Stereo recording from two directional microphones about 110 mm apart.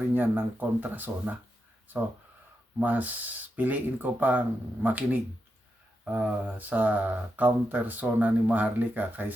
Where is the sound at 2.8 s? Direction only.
15° right (ahead or behind).